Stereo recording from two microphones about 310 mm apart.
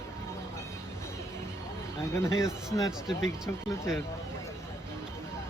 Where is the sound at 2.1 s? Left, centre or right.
Centre.